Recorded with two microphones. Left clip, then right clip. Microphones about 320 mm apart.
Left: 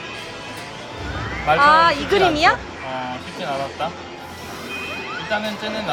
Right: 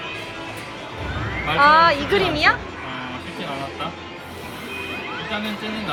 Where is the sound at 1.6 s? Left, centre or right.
Centre.